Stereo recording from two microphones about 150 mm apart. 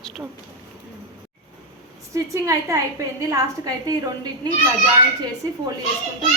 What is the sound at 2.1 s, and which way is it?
A woman's voice, 20° right (ahead or behind).